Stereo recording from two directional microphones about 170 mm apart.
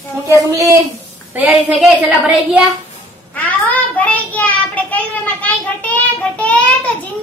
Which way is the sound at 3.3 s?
10° left (ahead or behind).